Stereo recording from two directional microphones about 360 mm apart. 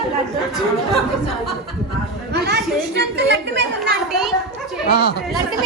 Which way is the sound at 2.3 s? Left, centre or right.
Right.